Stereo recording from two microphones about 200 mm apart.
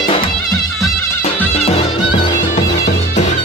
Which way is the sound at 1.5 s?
30° left (ahead or behind).